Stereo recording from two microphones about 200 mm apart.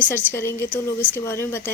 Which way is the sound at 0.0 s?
10° left (ahead or behind).